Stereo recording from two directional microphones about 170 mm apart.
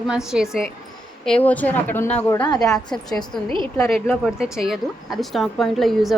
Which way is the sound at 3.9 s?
Centre (ahead or behind).